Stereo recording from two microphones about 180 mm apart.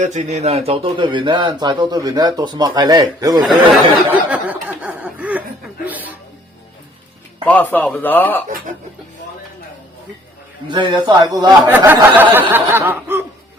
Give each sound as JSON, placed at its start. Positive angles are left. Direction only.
{"t": 0.0, "sound": "speech", "side_deg": -40}
{"t": 3.7, "sound": "snicker", "side_deg": -5}
{"t": 5.8, "sound": "music", "side_deg": -10}
{"t": 7.4, "sound": "a man's voice", "side_deg": 10}
{"t": 10.7, "sound": "speech", "side_deg": -25}
{"t": 11.6, "sound": "snicker", "side_deg": -10}